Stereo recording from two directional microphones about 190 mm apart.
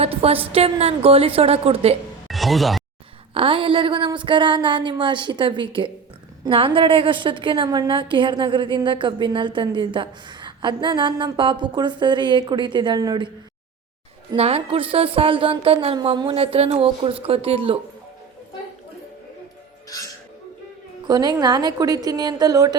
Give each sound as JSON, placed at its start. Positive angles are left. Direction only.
{"t": 0.0, "sound": "a woman's voice", "side_deg": -30}
{"t": 2.2, "sound": "music", "side_deg": 0}
{"t": 3.3, "sound": "a woman's voice", "side_deg": -30}
{"t": 21.1, "sound": "a woman's voice", "side_deg": -20}